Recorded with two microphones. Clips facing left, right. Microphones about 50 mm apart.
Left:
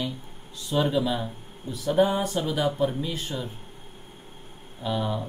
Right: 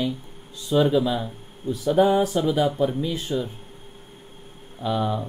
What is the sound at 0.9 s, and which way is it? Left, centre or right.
A man's voice, centre.